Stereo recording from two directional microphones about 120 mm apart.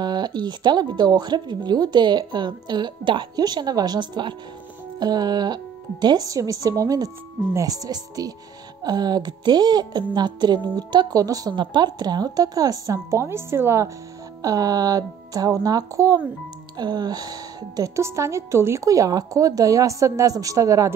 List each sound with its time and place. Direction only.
0.0 s a woman's voice: 35° right (ahead or behind)